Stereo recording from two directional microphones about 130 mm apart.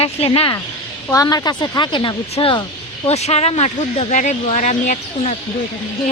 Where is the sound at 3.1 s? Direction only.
55° left (ahead or behind).